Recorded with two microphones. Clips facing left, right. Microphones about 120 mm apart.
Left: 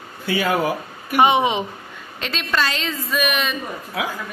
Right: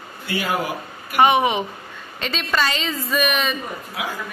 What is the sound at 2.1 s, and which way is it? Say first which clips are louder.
A woman's voice: even; centre (ahead or behind).